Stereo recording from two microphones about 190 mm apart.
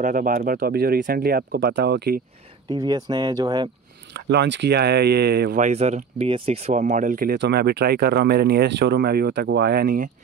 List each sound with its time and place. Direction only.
0.0 s speech: 45° right (ahead or behind)
2.7 s speech: 20° right (ahead or behind)
4.1 s speech: 65° right (ahead or behind)
5.6 s speech: 35° right (ahead or behind)